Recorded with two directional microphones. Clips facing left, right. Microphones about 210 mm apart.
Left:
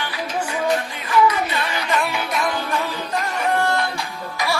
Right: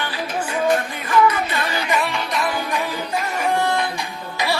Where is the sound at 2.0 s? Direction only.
Centre (ahead or behind).